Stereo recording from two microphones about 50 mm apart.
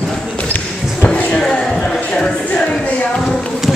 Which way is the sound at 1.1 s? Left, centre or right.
Centre.